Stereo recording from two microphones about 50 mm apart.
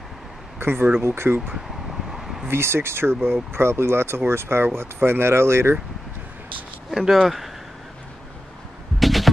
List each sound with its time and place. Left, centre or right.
0.6 s speech: right
2.0 s a sound: centre
2.4 s speech: right
6.9 s speech: centre
9.0 s music: centre